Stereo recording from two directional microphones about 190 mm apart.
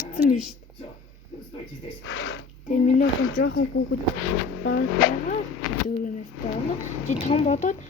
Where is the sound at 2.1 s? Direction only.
90° left.